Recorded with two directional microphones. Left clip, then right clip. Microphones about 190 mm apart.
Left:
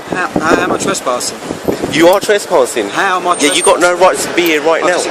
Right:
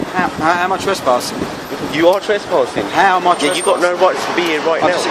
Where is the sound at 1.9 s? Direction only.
45° left (ahead or behind).